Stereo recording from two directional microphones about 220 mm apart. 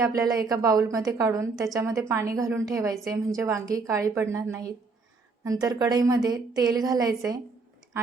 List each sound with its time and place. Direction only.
0.0 s a woman's voice: 15° right (ahead or behind)